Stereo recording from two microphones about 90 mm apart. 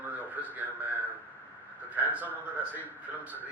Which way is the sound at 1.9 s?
15° right (ahead or behind).